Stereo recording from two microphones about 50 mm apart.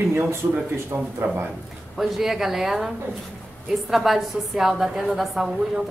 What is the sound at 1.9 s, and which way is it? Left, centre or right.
Speech, centre.